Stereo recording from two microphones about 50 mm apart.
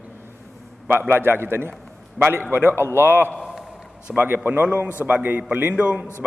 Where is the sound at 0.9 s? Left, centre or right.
Right.